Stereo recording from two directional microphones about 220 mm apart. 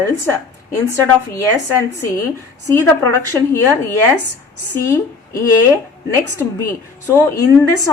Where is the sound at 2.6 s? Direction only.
10° left (ahead or behind).